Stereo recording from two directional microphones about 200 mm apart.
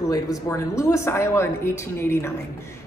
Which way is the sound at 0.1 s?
15° left (ahead or behind).